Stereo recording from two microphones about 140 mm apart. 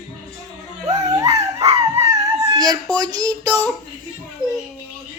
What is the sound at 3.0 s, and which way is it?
Child singing, 25° right (ahead or behind).